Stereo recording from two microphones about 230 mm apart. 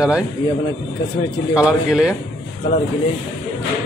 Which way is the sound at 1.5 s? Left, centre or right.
Centre.